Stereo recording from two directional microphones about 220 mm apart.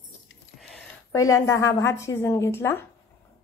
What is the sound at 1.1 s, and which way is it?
A woman's voice, 15° left (ahead or behind).